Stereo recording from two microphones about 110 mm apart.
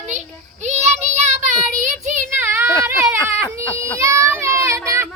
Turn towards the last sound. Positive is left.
turn(degrees=-25)  # may be behind; listen again after turning